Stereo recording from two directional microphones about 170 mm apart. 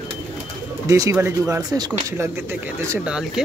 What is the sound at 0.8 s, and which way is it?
Speech, 20° right (ahead or behind).